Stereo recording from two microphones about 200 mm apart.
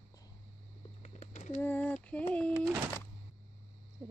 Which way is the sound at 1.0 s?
35° left (ahead or behind).